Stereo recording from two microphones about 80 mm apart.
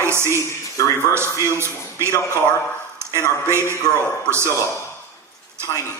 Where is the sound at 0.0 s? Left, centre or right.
Right.